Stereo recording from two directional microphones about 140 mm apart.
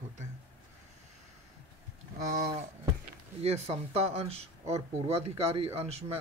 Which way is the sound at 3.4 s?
50° right (ahead or behind).